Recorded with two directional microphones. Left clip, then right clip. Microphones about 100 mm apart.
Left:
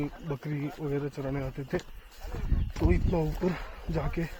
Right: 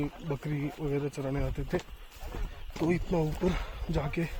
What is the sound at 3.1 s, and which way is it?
Speech, 25° right (ahead or behind).